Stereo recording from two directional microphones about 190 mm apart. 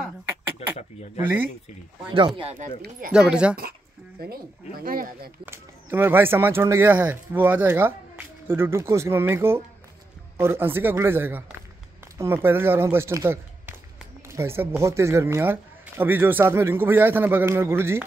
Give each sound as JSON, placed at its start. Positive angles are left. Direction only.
{"t": 0.6, "sound": "a sound", "side_deg": 35}
{"t": 2.1, "sound": "speech", "side_deg": -25}
{"t": 3.1, "sound": "speech", "side_deg": -5}
{"t": 4.2, "sound": "speech", "side_deg": -50}
{"t": 5.4, "sound": "speech", "side_deg": -10}